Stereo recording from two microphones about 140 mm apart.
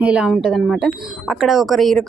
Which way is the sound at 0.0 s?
5° right (ahead or behind).